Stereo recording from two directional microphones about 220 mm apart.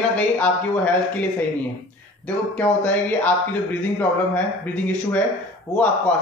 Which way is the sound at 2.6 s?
5° left (ahead or behind).